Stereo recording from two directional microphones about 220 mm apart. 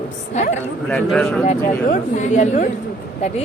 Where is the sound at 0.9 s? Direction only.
5° left (ahead or behind).